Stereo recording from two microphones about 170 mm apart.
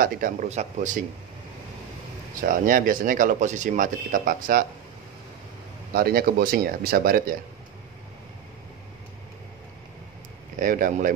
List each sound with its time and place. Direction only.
0.0 s speech: 50° right (ahead or behind)
2.4 s speech: 55° right (ahead or behind)
5.9 s speech: 60° right (ahead or behind)
10.6 s speech: 50° right (ahead or behind)